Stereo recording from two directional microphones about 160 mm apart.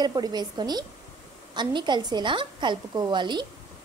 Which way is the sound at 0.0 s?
25° right (ahead or behind).